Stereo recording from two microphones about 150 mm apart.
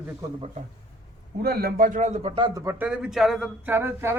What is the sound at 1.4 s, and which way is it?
A man's voice, 90° right.